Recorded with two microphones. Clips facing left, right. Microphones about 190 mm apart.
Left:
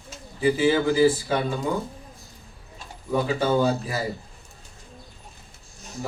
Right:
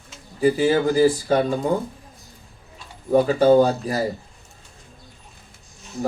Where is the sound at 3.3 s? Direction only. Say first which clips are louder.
Right 7 dB; 40° right (ahead or behind).